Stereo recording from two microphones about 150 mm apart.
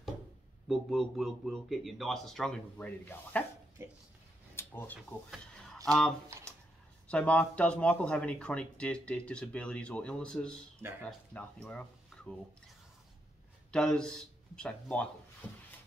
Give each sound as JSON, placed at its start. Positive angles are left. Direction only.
{"t": 0.7, "sound": "a man's voice", "side_deg": 0}
{"t": 3.8, "sound": "speech", "side_deg": -20}
{"t": 4.6, "sound": "a sound", "side_deg": 15}
{"t": 5.9, "sound": "a man's voice", "side_deg": 5}
{"t": 13.7, "sound": "speech", "side_deg": 5}